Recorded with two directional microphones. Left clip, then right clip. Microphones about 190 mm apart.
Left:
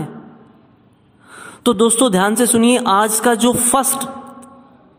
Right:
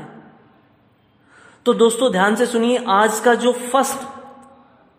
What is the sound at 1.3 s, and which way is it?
A woman's voice, 30° left (ahead or behind).